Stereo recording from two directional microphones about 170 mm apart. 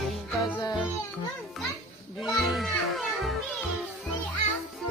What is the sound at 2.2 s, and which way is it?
Children playing, centre (ahead or behind).